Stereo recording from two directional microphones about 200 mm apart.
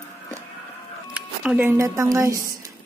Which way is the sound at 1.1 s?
5° right (ahead or behind).